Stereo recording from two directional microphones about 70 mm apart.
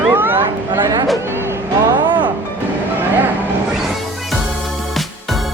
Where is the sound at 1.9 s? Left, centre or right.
Right.